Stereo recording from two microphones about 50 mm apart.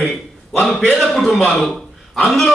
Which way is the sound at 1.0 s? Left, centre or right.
Centre.